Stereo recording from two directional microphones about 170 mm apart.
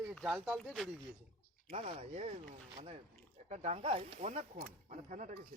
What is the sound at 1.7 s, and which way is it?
Speech, 45° right (ahead or behind).